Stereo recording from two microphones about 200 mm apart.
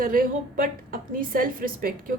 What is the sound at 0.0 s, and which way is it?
A woman's voice, 45° right (ahead or behind).